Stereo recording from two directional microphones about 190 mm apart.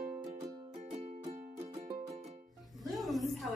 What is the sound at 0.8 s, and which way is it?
Music, 35° right (ahead or behind).